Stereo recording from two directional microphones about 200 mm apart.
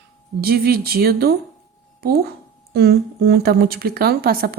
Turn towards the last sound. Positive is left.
turn(degrees=-50)  # may be behind; listen again after turning